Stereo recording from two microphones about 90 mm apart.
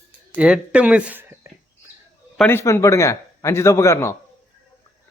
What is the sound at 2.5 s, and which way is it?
A man's voice, 25° left (ahead or behind).